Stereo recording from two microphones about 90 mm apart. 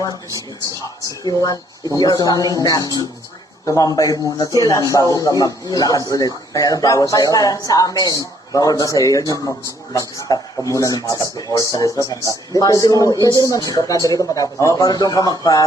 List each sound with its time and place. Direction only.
1.2 s a man's voice: 35° left (ahead or behind)